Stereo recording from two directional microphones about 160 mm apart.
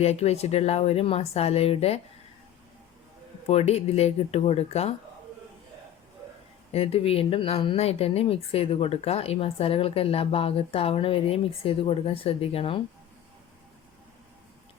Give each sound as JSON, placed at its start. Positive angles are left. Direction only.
{"t": 0.0, "sound": "a woman's voice", "side_deg": 40}
{"t": 3.4, "sound": "a woman's voice", "side_deg": 40}
{"t": 6.7, "sound": "a woman's voice", "side_deg": 40}